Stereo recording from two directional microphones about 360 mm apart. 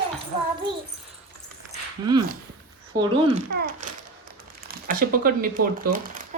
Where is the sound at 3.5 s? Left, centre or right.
Right.